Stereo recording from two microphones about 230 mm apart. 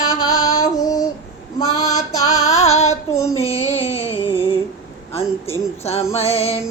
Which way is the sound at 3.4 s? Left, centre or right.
Left.